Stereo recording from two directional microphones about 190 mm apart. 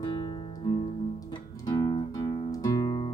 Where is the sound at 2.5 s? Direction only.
20° left (ahead or behind).